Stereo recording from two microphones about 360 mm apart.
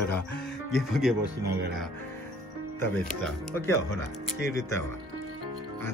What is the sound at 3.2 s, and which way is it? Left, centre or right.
Speech, centre.